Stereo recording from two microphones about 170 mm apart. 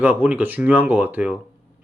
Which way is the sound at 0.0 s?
10° right (ahead or behind).